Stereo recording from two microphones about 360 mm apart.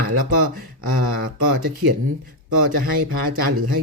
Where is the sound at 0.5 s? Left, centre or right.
Right.